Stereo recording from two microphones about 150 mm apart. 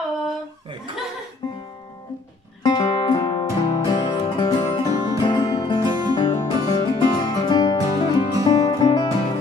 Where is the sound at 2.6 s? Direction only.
30° left (ahead or behind).